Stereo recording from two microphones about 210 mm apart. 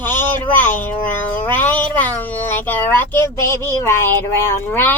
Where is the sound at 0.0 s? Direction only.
10° left (ahead or behind).